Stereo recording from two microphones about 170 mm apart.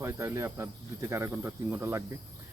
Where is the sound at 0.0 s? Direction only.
15° right (ahead or behind).